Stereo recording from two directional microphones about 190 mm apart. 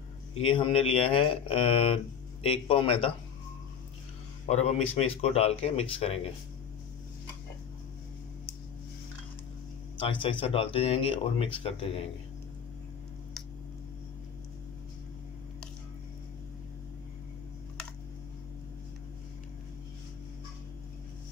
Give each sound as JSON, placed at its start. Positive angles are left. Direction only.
{"t": 0.5, "sound": "speech", "side_deg": 25}
{"t": 4.5, "sound": "speech", "side_deg": 35}
{"t": 9.9, "sound": "speech", "side_deg": 30}